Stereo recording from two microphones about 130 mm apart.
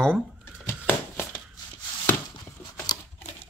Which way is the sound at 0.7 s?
15° left (ahead or behind).